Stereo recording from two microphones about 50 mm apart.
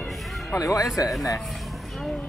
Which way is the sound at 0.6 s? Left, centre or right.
Left.